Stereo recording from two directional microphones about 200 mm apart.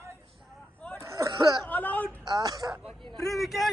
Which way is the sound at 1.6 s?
10° left (ahead or behind).